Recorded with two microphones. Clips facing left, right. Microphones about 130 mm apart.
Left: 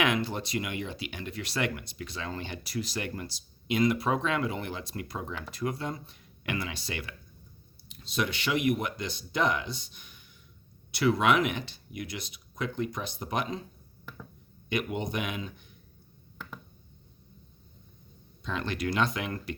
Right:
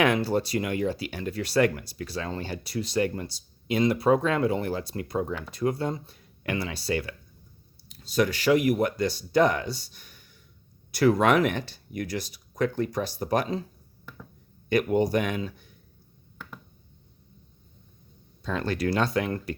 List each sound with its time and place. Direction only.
0.0 s speech: 35° right (ahead or behind)
14.7 s speech: 40° right (ahead or behind)
18.4 s speech: 35° right (ahead or behind)